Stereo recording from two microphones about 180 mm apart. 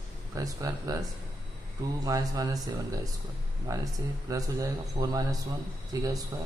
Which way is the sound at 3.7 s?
20° right (ahead or behind).